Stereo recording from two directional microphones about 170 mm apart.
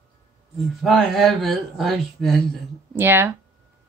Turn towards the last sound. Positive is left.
turn(degrees=-10)  # may be behind; listen again after turning